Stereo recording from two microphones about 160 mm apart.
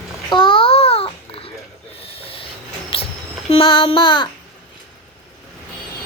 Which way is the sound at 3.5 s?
35° left (ahead or behind).